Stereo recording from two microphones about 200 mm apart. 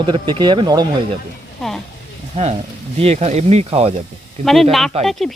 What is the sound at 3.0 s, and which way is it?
Speech, 30° right (ahead or behind).